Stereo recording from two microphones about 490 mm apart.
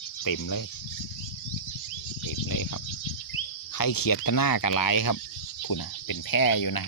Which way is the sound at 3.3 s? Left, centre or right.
Left.